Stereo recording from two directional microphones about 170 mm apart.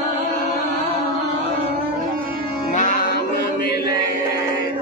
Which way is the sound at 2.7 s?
50° left (ahead or behind).